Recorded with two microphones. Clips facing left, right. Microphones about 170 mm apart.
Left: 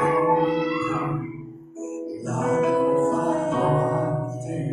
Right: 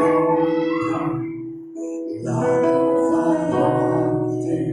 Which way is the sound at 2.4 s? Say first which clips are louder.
Right 4 dB; 35° right (ahead or behind).